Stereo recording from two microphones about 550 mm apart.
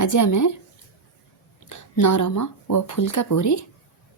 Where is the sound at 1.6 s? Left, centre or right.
Left.